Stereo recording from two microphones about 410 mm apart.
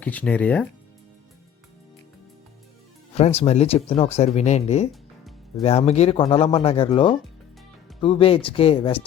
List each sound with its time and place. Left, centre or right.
0.0 s speech: centre
3.2 s speech: centre
4.9 s music: centre
5.6 s speech: centre